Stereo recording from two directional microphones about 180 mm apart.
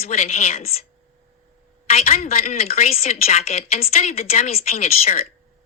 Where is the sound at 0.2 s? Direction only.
35° left (ahead or behind).